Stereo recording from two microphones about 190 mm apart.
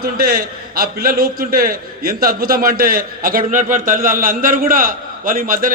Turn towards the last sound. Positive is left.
turn(degrees=-45)  # may be behind; listen again after turning